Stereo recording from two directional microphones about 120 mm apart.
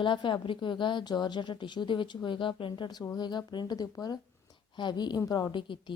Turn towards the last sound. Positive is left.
turn(degrees=45)  # may be behind; listen again after turning